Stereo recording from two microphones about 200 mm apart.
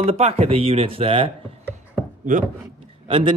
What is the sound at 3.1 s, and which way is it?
Speech, 25° right (ahead or behind).